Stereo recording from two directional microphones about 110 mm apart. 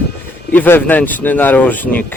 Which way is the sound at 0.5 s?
15° left (ahead or behind).